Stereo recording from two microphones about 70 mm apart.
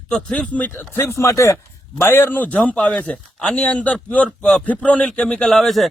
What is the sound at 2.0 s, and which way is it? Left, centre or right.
A man's voice, left.